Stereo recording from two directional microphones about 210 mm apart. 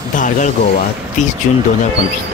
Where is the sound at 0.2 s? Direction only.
40° left (ahead or behind).